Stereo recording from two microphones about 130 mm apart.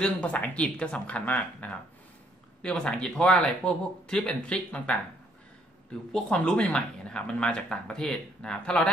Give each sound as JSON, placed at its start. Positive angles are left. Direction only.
{"t": 0.0, "sound": "speech", "side_deg": 10}
{"t": 6.1, "sound": "speech", "side_deg": 5}